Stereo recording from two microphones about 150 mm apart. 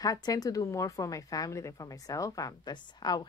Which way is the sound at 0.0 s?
25° left (ahead or behind).